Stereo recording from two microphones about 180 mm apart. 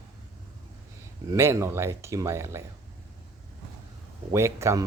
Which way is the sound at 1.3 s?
15° right (ahead or behind).